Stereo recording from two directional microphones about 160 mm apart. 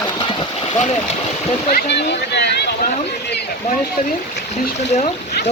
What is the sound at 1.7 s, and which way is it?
Speech, 90° left.